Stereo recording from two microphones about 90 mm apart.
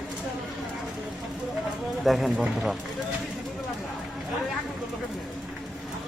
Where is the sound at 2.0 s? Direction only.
Centre (ahead or behind).